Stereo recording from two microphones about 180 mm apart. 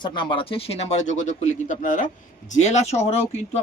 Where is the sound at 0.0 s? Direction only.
25° left (ahead or behind).